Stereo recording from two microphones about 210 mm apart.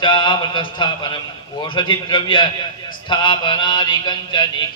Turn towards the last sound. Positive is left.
turn(degrees=20)  # may be behind; listen again after turning